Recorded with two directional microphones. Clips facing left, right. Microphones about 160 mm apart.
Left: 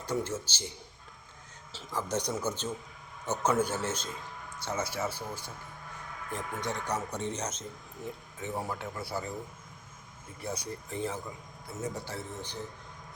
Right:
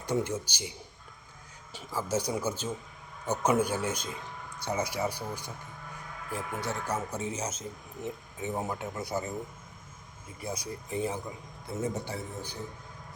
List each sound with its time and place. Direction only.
0.0 s speech: 15° right (ahead or behind)
1.7 s speech: 5° right (ahead or behind)
6.3 s speech: 5° right (ahead or behind)
8.0 s speech: 20° right (ahead or behind)
10.4 s speech: 10° right (ahead or behind)
11.7 s speech: 30° right (ahead or behind)
12.0 s speech: 10° right (ahead or behind)